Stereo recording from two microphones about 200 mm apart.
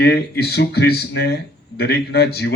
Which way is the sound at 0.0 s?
50° left (ahead or behind).